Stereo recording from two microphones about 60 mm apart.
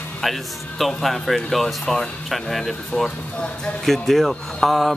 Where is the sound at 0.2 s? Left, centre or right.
Centre.